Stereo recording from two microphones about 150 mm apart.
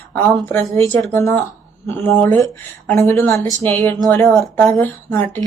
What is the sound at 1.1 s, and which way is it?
Speech, 20° left (ahead or behind).